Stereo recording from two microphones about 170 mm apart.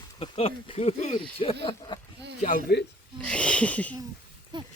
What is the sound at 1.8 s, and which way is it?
Speech, 20° left (ahead or behind).